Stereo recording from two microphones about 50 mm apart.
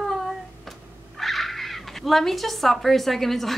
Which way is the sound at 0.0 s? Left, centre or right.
Centre.